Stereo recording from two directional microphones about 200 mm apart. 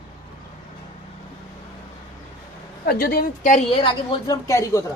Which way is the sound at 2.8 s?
50° left (ahead or behind).